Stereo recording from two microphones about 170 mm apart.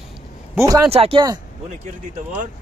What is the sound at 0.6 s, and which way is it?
Speech, 20° right (ahead or behind).